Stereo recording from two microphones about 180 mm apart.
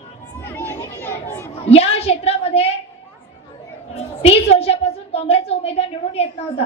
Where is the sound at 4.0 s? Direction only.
35° left (ahead or behind).